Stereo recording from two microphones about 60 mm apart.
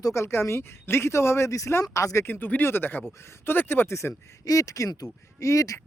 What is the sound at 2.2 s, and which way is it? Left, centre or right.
Speech, left.